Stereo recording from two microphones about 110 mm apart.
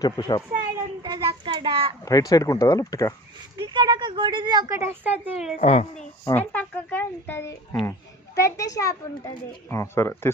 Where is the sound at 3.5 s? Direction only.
45° right (ahead or behind).